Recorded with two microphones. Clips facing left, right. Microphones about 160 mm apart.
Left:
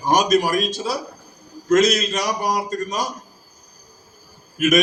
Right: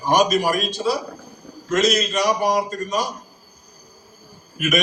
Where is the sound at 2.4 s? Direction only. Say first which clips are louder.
Right 2 dB; 45° left (ahead or behind).